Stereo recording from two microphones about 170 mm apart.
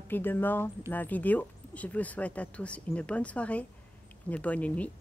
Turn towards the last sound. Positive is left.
turn(degrees=10)  # may be behind; listen again after turning